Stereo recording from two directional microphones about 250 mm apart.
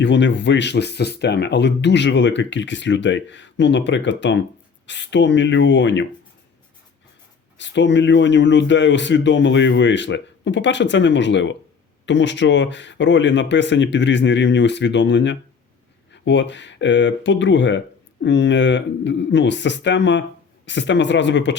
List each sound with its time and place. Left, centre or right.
0.0 s speech: left
7.6 s speech: left